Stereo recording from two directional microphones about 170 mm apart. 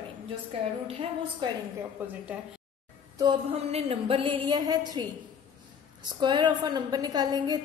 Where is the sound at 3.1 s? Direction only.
30° right (ahead or behind).